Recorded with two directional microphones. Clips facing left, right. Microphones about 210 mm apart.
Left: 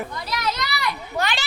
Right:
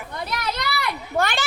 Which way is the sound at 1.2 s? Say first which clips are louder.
Right 4 dB; 50° right (ahead or behind).